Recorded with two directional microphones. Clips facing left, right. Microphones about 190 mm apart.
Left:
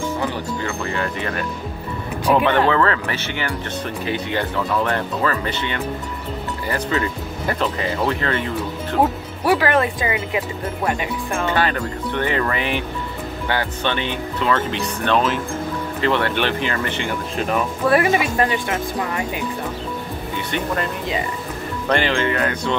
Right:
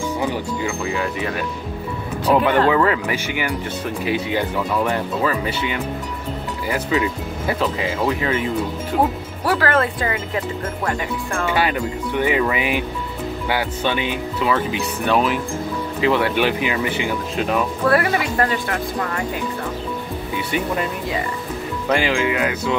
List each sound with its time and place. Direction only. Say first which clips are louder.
0.2 s speech: right 2 dB; 10° right (ahead or behind)
9.4 s speech: left 2 dB; 15° left (ahead or behind)
11.4 s speech: right 1 dB; 10° right (ahead or behind)
17.8 s speech: left 2 dB; 20° left (ahead or behind)
20.5 s speech: right 1 dB; 5° right (ahead or behind)